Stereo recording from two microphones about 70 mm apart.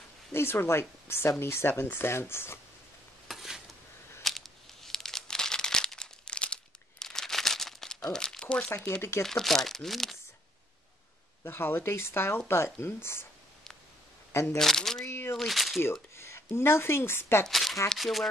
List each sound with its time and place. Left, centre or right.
0.3 s speech: left
3.3 s stir: centre
4.2 s crumpling: centre
8.1 s speech: centre
9.2 s speech: centre
11.4 s speech: left
14.3 s speech: left
14.6 s speech: centre
15.0 s a sound: left
15.3 s speech: centre
15.8 s a sound: left
16.5 s speech: left
17.5 s shuffling cards: centre
17.8 s speech: centre